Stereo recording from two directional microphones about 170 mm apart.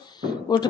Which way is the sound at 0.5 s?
25° left (ahead or behind).